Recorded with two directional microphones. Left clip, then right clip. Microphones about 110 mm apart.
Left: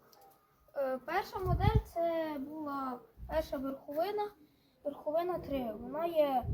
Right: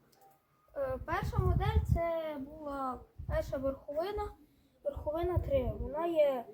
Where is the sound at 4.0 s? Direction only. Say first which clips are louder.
Left 3 dB; 25° right (ahead or behind).